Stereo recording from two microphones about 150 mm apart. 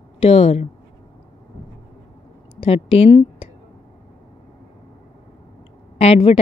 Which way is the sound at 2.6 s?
40° left (ahead or behind).